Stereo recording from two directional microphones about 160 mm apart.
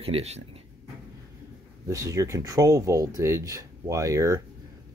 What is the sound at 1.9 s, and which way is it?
Speech, 20° right (ahead or behind).